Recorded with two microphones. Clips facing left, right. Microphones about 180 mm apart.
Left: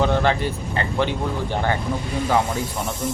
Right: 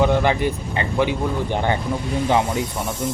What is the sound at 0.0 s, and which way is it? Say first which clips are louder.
Speech: right 2 dB; 15° right (ahead or behind).